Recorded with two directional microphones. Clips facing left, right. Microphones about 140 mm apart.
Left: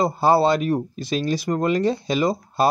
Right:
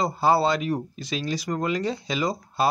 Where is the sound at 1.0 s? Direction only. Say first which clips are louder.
Left 6 dB; 50° left (ahead or behind).